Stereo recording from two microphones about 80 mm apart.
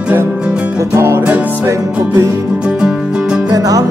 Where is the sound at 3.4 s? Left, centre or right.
Right.